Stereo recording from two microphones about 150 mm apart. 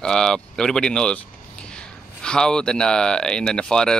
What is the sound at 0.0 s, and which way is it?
Speech, 5° left (ahead or behind).